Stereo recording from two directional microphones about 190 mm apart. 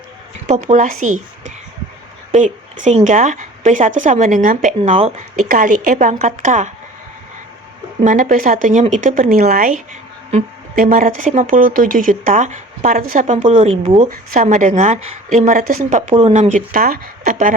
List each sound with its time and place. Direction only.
0.4 s speech: 35° right (ahead or behind)
2.3 s speech: 40° right (ahead or behind)
8.0 s speech: 45° right (ahead or behind)